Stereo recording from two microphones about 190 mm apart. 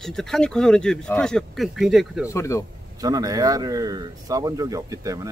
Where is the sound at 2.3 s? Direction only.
15° left (ahead or behind).